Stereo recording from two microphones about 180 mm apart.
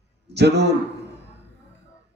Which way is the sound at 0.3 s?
70° right (ahead or behind).